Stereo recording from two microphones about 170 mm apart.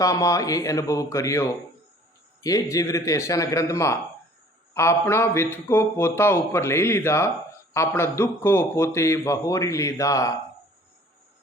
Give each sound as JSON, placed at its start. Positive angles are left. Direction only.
{"t": 0.0, "sound": "a man's voice", "side_deg": 20}